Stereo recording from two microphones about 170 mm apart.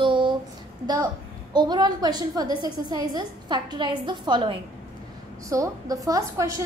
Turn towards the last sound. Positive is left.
turn(degrees=-20)  # may be behind; listen again after turning